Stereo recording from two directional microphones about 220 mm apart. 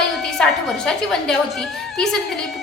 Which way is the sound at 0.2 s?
Centre (ahead or behind).